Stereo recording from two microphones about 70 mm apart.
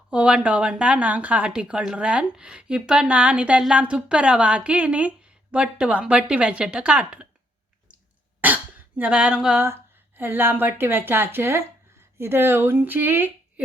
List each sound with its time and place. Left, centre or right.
0.1 s a woman's voice: centre
8.4 s speech: right
10.2 s a woman's voice: right